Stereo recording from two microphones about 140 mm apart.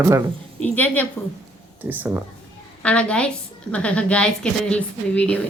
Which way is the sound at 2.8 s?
10° left (ahead or behind).